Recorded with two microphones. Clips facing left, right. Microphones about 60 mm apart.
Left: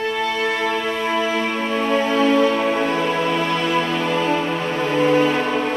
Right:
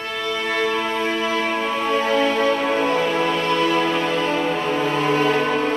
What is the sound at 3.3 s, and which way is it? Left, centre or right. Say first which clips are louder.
Music: right 1 dB; centre.